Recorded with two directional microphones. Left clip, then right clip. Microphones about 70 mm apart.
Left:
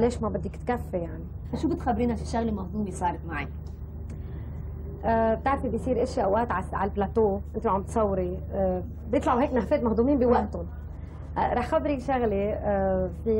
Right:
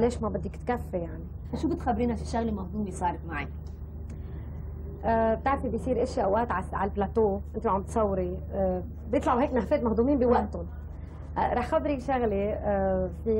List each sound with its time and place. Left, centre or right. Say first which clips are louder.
0.0 s a woman's voice: left 1 dB; right
5.0 s a woman's voice: left 1 dB; right